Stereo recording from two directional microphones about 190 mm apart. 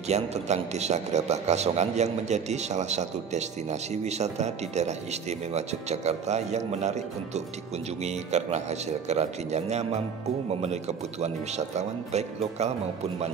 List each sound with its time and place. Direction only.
0.1 s a man's voice: 35° right (ahead or behind)